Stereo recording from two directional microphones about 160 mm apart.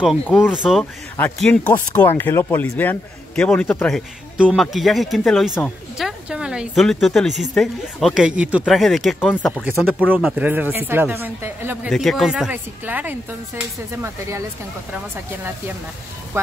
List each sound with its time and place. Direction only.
0.2 s speech: 10° left (ahead or behind)
0.5 s speech: 5° right (ahead or behind)
1.1 s speech: 10° left (ahead or behind)
4.4 s speech: 5° right (ahead or behind)
9.2 s speech: 10° left (ahead or behind)
9.8 s speech: 10° right (ahead or behind)
11.9 s speech: centre (ahead or behind); by 14.4 s 15° right (ahead or behind)